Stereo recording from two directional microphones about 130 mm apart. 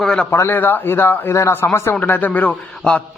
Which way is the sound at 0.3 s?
20° left (ahead or behind).